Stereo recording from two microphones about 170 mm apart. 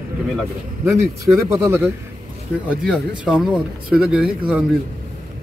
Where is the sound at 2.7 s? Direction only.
Centre (ahead or behind).